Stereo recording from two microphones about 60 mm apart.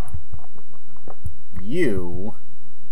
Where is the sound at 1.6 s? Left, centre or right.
Centre.